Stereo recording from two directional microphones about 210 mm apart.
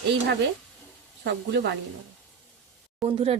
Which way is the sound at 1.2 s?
55° right (ahead or behind).